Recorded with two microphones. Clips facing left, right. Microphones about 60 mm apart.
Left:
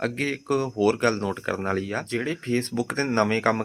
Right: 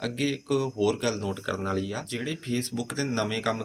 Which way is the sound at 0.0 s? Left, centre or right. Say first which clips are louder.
Left 2 dB; left.